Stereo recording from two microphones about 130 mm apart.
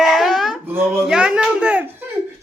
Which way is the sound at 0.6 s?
15° right (ahead or behind).